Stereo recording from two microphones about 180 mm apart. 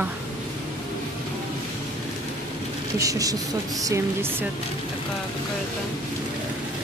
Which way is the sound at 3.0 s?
20° right (ahead or behind).